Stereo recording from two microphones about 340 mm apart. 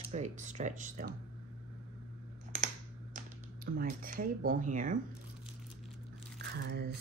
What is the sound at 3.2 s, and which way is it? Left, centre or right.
Typing, right.